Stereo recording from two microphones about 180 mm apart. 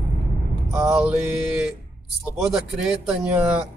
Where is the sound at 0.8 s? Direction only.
5° right (ahead or behind).